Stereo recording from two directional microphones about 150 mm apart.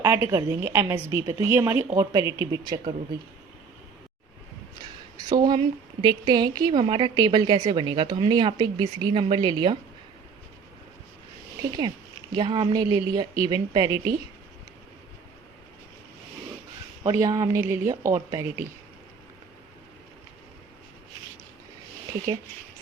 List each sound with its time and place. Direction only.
0.0 s a woman's voice: 20° right (ahead or behind)
5.3 s a woman's voice: 30° right (ahead or behind)
12.3 s a woman's voice: 30° right (ahead or behind)
17.0 s a woman's voice: 20° right (ahead or behind)